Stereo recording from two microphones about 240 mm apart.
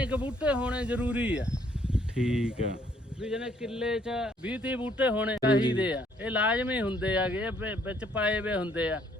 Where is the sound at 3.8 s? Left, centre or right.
Centre.